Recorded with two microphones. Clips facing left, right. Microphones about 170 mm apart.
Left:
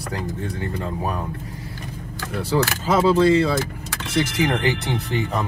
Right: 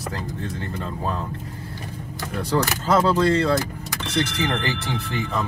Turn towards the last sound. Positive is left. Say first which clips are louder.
# left 2 dB
turn(degrees=20)  # may be behind; listen again after turning